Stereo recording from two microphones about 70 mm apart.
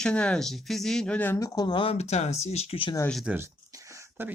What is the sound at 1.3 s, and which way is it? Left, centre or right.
Speech, left.